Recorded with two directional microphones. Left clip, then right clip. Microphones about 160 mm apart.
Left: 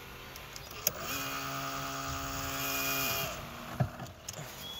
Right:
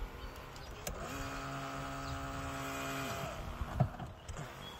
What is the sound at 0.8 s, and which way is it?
Vehicle, 55° left (ahead or behind).